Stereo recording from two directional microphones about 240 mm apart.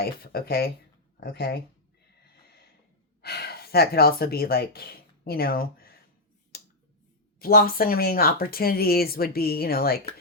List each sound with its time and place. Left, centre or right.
0.0 s speech: left
3.2 s speech: left
6.5 s finger snapping: left
7.3 s speech: left